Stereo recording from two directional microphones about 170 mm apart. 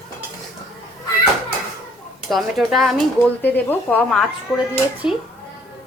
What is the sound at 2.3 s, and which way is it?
Speech, centre (ahead or behind).